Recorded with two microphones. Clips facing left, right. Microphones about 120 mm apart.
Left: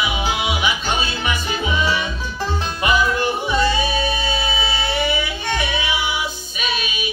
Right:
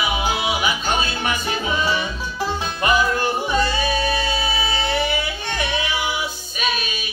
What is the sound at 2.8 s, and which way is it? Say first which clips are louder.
Music: even; 40° right (ahead or behind).